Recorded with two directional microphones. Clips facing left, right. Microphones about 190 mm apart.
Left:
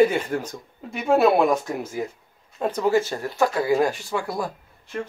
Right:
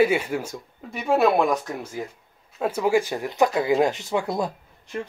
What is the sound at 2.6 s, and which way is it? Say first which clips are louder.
Speech: even; 10° right (ahead or behind).